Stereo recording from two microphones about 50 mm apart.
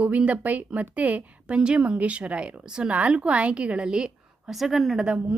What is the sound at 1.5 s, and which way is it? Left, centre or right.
A woman's voice, centre.